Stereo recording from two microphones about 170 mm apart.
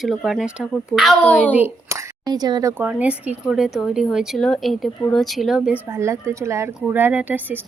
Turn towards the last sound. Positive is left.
turn(degrees=-10)  # may be behind; listen again after turning